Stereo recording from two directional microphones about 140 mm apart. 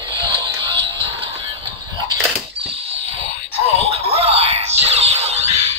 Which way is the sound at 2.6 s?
40° right (ahead or behind).